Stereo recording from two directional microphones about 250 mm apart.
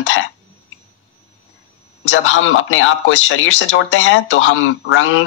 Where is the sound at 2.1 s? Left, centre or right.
Left.